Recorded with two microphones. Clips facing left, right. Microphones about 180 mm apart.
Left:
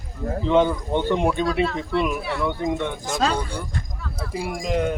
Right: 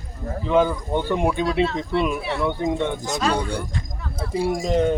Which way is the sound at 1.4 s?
25° right (ahead or behind).